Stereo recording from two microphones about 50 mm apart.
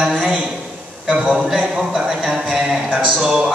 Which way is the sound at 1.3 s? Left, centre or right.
Centre.